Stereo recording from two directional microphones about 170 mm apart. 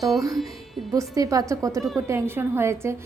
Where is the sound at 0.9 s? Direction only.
20° right (ahead or behind).